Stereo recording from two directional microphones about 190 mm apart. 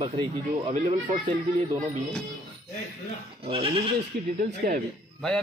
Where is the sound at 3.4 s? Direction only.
30° right (ahead or behind).